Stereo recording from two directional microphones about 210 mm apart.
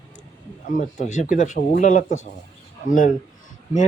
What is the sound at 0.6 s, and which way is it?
Speech, 40° left (ahead or behind).